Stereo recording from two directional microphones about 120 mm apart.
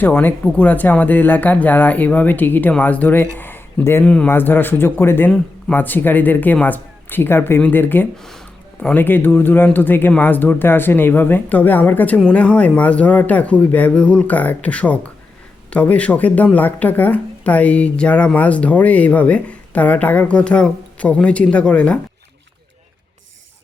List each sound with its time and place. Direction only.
0.0 s speech: 15° left (ahead or behind)
3.3 s a sound: 15° left (ahead or behind)
4.0 s speech: 10° left (ahead or behind)